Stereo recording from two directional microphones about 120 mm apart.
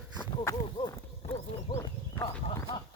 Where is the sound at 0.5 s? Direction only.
30° left (ahead or behind).